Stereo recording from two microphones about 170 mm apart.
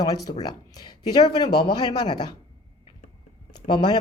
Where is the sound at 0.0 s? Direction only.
20° left (ahead or behind).